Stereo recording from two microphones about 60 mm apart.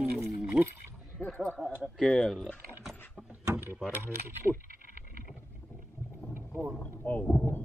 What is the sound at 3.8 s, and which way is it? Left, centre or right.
Speech, right.